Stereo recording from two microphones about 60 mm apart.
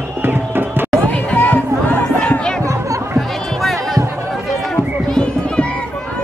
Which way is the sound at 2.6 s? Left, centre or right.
Right.